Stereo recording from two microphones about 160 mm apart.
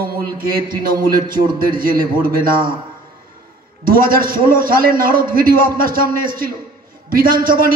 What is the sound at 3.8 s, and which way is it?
A man's voice, 65° right (ahead or behind).